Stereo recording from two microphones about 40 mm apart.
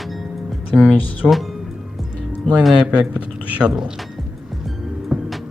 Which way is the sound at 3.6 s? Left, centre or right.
Centre.